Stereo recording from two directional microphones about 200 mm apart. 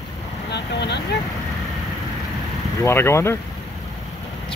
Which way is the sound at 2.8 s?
10° left (ahead or behind).